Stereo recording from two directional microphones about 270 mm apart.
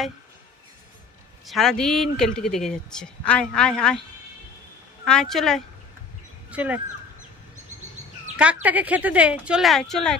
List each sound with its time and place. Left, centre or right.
1.4 s speech: centre
5.0 s speech: centre
8.6 s speech: centre